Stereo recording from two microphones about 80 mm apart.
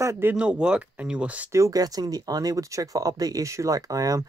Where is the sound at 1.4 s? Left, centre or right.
Right.